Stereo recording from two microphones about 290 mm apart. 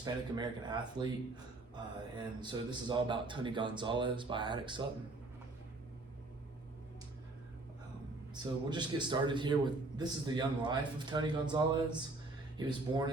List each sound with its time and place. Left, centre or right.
0.0 s a man's voice: centre
8.7 s a man's voice: centre